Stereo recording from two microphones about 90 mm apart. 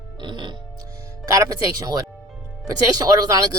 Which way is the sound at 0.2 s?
60° right (ahead or behind).